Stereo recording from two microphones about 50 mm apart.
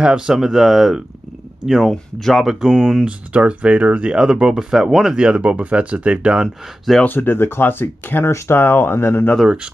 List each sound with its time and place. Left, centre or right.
0.0 s speech: centre
0.4 s speech: centre
3.1 s speech: right
5.1 s speech: right
7.1 s speech: left
8.3 s speech: left
8.5 s speech: left